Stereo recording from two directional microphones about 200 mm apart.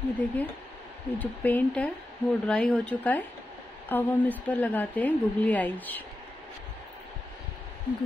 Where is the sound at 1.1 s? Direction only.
10° left (ahead or behind).